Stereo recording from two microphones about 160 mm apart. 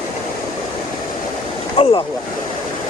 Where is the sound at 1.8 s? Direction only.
35° left (ahead or behind).